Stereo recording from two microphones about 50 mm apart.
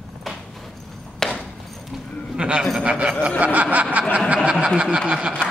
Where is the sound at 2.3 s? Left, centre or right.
Centre.